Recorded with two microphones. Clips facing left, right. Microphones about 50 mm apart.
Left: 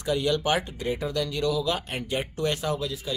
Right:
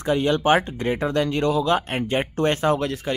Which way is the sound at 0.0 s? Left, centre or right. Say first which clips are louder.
Right 5 dB; right.